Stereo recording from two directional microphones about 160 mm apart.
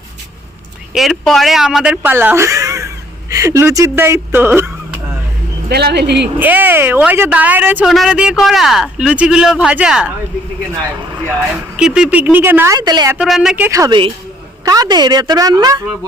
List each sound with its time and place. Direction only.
0.9 s speech: centre (ahead or behind); by 4.7 s 15° right (ahead or behind)
5.6 s speech: 85° right
6.4 s speech: 10° right (ahead or behind)
11.8 s speech: 5° right (ahead or behind); by 13.1 s 25° right (ahead or behind)
13.1 s speech: centre (ahead or behind)
13.7 s a woman's voice: 20° right (ahead or behind)